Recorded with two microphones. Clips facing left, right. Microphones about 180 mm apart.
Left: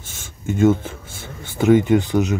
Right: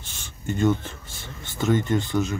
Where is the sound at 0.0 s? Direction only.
50° left (ahead or behind).